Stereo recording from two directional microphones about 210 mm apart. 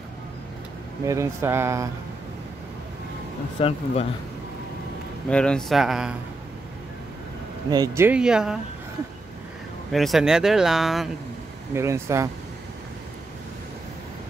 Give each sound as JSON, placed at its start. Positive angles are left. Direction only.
{"t": 1.0, "sound": "speech", "side_deg": -15}
{"t": 3.5, "sound": "speech", "side_deg": 25}
{"t": 5.3, "sound": "speech", "side_deg": 5}
{"t": 7.7, "sound": "speech", "side_deg": -15}
{"t": 9.9, "sound": "speech", "side_deg": 0}
{"t": 11.7, "sound": "speech", "side_deg": -15}